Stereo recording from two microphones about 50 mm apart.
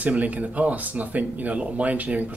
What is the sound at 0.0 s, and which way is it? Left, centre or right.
Speech, right.